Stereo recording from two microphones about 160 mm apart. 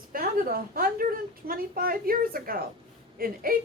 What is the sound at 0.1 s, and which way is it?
A woman's voice, 65° right (ahead or behind).